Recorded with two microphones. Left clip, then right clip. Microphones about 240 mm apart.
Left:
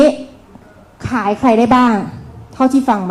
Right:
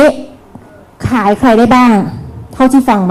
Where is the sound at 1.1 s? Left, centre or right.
Right.